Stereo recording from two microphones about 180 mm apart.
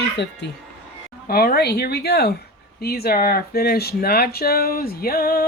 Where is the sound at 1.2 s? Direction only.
55° left (ahead or behind).